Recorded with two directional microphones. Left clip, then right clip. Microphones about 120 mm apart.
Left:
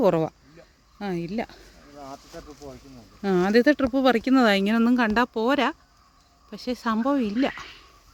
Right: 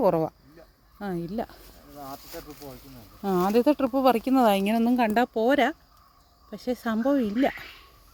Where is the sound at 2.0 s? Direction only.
5° right (ahead or behind).